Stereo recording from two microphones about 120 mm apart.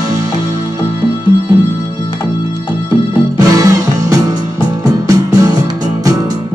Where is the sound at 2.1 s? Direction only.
45° left (ahead or behind).